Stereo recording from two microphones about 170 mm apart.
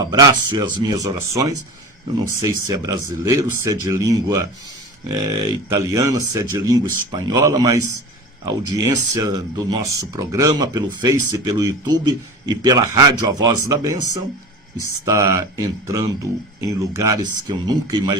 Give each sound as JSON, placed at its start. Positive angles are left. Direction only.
{"t": 0.0, "sound": "speech", "side_deg": -20}